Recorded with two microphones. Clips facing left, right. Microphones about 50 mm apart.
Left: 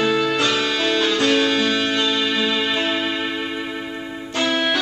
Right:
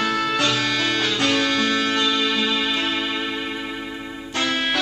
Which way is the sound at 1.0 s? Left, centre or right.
Centre.